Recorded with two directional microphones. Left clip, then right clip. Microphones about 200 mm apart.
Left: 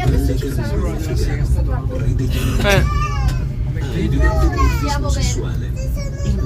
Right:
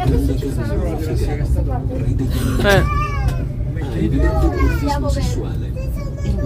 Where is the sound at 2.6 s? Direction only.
15° right (ahead or behind).